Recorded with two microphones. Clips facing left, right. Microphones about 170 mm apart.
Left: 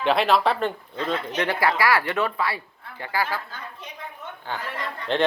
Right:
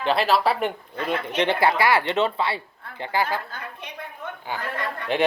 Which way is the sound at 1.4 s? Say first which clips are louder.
Right 3 dB; 25° right (ahead or behind).